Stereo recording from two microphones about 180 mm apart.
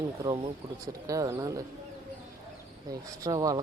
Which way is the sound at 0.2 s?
20° right (ahead or behind).